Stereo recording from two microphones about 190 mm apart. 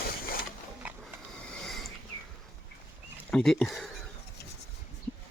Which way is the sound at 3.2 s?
5° left (ahead or behind).